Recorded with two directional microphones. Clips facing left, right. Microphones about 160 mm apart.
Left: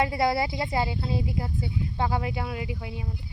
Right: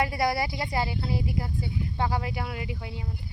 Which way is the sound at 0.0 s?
25° left (ahead or behind).